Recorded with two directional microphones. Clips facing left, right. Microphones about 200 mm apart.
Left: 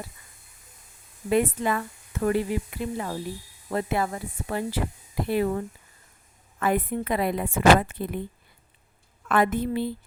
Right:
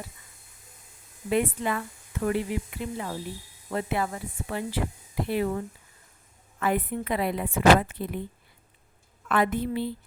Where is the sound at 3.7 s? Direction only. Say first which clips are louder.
Left 2 dB; 40° left (ahead or behind).